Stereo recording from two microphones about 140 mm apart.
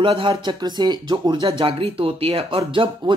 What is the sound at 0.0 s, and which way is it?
Speech, 40° right (ahead or behind).